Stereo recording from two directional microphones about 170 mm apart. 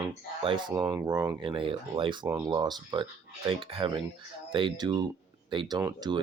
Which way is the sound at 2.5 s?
25° right (ahead or behind).